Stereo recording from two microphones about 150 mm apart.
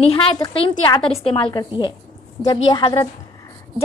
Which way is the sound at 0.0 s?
40° left (ahead or behind).